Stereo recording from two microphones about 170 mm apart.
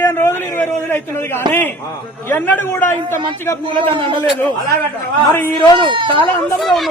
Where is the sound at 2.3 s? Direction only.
10° left (ahead or behind).